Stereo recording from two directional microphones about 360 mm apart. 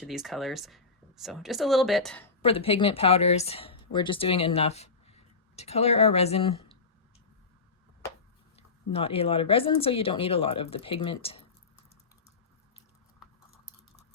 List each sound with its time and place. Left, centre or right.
0.0 s speech: centre
2.4 s speech: centre
8.5 s speech: centre